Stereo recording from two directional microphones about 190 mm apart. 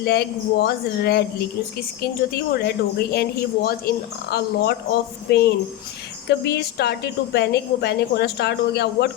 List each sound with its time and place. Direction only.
0.0 s a woman's voice: 55° left (ahead or behind)